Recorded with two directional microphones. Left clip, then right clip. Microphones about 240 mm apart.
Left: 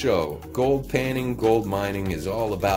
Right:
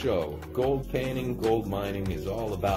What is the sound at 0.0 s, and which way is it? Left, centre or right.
Speech, centre.